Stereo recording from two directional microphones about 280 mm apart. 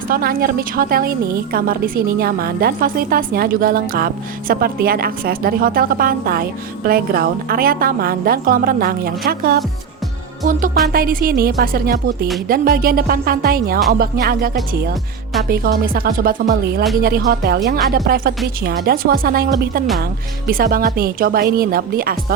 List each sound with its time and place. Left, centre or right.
0.1 s a woman's voice: right
10.4 s music: right
10.8 s a woman's voice: right
20.5 s a woman's voice: right